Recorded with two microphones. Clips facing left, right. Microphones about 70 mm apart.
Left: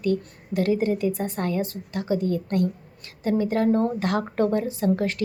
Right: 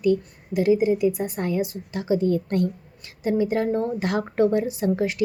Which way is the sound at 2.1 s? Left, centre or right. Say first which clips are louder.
Right 3 dB; right.